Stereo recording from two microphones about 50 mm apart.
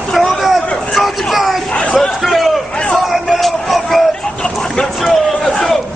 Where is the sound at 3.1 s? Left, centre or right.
Centre.